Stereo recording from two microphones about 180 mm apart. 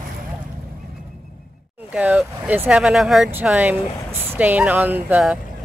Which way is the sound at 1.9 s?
10° right (ahead or behind).